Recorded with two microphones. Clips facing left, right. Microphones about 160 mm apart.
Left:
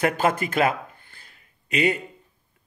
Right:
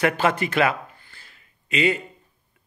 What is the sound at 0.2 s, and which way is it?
Speech, 45° left (ahead or behind).